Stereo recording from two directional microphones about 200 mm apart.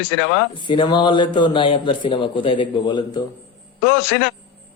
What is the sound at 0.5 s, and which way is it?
A man's voice, 25° left (ahead or behind).